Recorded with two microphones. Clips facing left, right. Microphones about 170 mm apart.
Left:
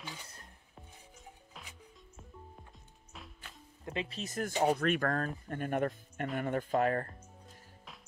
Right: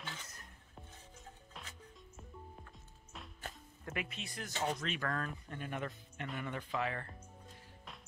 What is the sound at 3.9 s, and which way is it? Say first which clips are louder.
Speech: left 7 dB; 35° left (ahead or behind).